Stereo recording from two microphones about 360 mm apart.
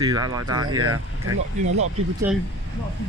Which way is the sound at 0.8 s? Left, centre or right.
Right.